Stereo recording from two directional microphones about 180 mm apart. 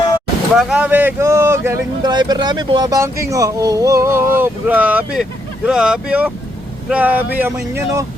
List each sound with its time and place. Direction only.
0.5 s speech: centre (ahead or behind)
2.0 s speech: 25° right (ahead or behind)